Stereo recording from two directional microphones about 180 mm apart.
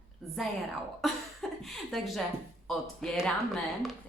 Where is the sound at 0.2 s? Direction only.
Centre (ahead or behind).